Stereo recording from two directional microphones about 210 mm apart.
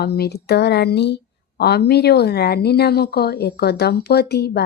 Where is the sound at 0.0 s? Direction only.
50° left (ahead or behind).